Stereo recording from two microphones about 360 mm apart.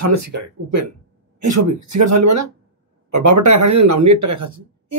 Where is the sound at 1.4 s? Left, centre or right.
Right.